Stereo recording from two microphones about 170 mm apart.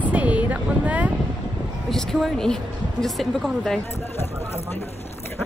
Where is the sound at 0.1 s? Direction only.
10° right (ahead or behind).